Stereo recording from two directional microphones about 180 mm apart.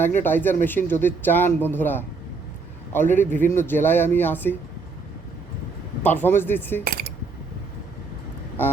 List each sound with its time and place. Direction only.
0.2 s speech: 10° left (ahead or behind)
6.0 s speech: 10° left (ahead or behind)
6.8 s cutlery: 55° right (ahead or behind)